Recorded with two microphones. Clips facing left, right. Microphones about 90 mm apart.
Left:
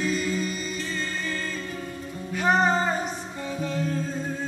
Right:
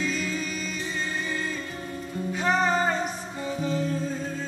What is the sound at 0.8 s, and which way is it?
Music, 15° right (ahead or behind).